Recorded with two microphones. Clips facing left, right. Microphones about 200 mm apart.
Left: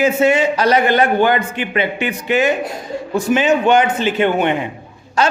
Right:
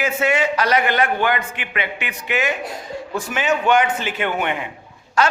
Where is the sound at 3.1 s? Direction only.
20° left (ahead or behind).